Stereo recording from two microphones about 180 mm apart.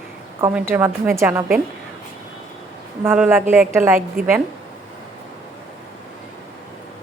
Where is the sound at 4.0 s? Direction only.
50° right (ahead or behind).